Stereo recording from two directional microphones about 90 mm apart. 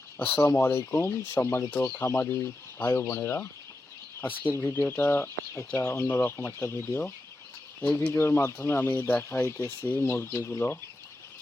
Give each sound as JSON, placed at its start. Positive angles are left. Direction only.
{"t": 0.2, "sound": "speech", "side_deg": 25}